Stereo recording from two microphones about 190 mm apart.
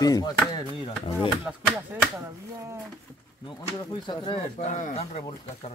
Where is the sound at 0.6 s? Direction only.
25° left (ahead or behind).